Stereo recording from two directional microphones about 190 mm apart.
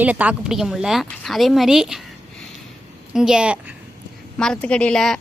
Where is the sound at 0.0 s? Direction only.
10° right (ahead or behind).